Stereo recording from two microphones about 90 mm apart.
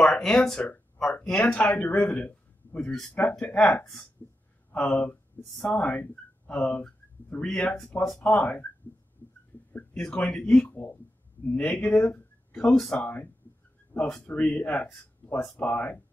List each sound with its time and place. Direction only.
0.0 s speech: 5° left (ahead or behind)
9.9 s speech: 10° left (ahead or behind)
10.7 s speech: 25° left (ahead or behind)
11.5 s speech: 15° left (ahead or behind)
12.7 s speech: 5° left (ahead or behind)
13.0 s speech: 20° left (ahead or behind)